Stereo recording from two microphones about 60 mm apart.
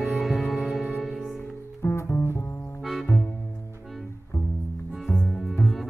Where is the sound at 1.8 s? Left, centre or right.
Left.